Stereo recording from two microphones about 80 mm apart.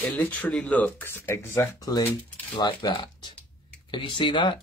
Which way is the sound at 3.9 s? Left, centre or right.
Left.